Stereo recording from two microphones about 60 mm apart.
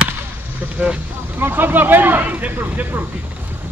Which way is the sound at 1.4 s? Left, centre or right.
Right.